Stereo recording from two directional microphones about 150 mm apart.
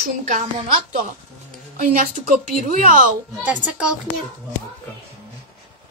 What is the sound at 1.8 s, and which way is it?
Speech, 60° right (ahead or behind).